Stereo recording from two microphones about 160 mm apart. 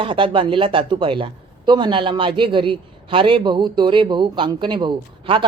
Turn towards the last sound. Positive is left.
turn(degrees=-30)  # may be behind; listen again after turning